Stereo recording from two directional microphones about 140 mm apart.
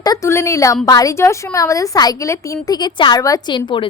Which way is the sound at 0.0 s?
25° left (ahead or behind).